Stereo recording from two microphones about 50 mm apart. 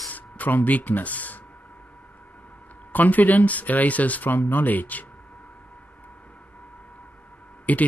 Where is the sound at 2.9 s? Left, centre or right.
Left.